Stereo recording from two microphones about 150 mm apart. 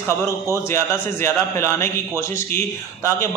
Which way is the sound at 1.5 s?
20° left (ahead or behind).